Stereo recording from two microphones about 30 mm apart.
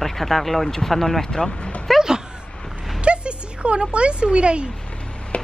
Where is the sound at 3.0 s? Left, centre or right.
Right.